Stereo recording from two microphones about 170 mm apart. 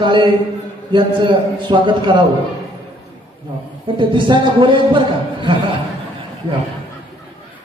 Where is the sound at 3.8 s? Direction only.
30° right (ahead or behind).